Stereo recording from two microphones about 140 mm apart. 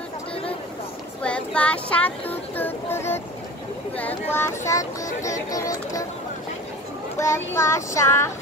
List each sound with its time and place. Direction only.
1.2 s speech: 10° left (ahead or behind); by 6.0 s 25° left (ahead or behind)
7.2 s speech: 20° left (ahead or behind)